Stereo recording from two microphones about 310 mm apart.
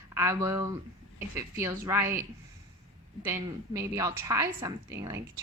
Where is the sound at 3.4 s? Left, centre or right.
Centre.